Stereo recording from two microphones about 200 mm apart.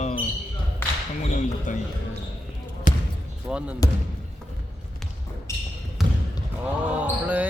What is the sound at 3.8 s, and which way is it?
Speech, 15° left (ahead or behind).